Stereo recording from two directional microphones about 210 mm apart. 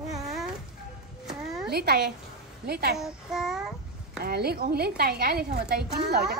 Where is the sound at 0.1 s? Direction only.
Centre (ahead or behind).